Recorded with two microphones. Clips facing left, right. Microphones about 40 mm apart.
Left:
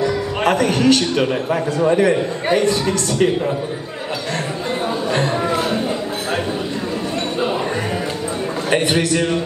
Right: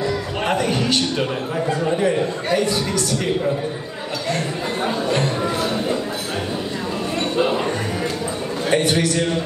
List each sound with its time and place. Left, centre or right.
0.5 s a man's voice: left
2.5 s a man's voice: left
5.4 s music: centre
8.7 s a man's voice: left